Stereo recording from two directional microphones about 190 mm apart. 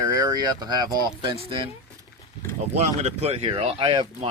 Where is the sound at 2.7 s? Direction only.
35° right (ahead or behind).